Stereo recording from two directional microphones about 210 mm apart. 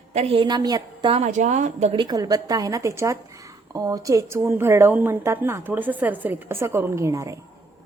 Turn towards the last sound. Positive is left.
turn(degrees=-15)  # may be behind; listen again after turning